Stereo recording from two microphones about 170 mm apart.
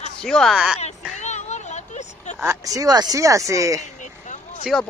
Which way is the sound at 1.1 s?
45° left (ahead or behind).